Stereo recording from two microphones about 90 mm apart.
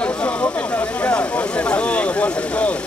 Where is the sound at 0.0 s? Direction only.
10° left (ahead or behind).